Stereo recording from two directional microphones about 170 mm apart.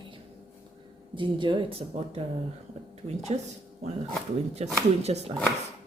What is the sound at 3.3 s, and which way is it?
Speech, 35° right (ahead or behind).